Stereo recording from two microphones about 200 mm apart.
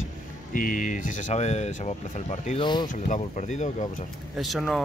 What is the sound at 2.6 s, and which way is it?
Speech, 20° left (ahead or behind).